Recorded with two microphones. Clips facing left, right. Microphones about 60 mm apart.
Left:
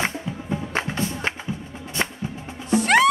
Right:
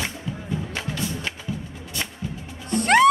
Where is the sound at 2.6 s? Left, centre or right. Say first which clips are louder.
Even; centre.